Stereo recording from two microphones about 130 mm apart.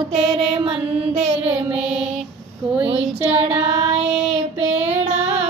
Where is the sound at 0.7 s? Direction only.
50° right (ahead or behind).